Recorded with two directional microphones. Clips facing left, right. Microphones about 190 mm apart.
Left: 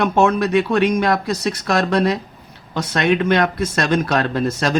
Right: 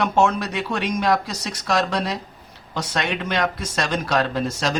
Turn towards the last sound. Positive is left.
turn(degrees=55)  # may be behind; listen again after turning